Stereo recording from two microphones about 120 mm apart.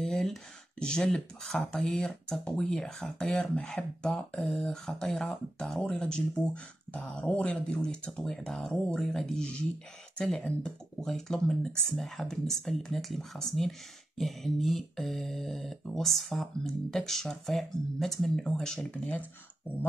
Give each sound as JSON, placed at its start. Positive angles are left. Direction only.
{"t": 0.0, "sound": "speech", "side_deg": 5}